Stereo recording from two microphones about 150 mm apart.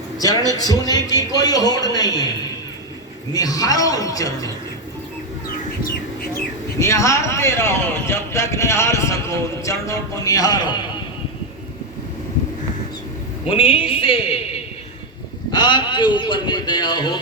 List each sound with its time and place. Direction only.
0.2 s speech: 25° left (ahead or behind)
3.3 s speech: 25° left (ahead or behind)
6.7 s speech: 20° left (ahead or behind)
13.5 s a man's voice: 40° left (ahead or behind)